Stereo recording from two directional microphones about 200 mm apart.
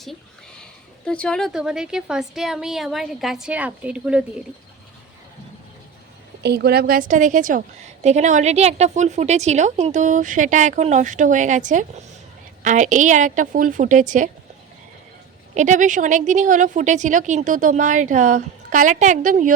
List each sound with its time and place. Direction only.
0.6 s speech: 5° left (ahead or behind)
6.4 s a woman's voice: 55° right (ahead or behind)
15.5 s a woman's voice: 40° right (ahead or behind)